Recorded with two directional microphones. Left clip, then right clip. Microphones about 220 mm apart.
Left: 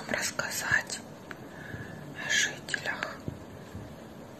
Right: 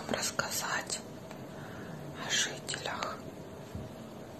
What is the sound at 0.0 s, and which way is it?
Whispering, 15° right (ahead or behind).